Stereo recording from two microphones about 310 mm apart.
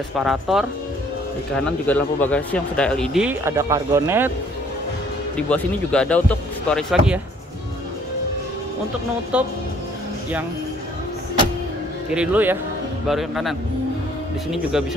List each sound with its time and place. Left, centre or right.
0.2 s speech: centre
1.9 s speech: centre
5.5 s speech: centre
12.1 s speech: centre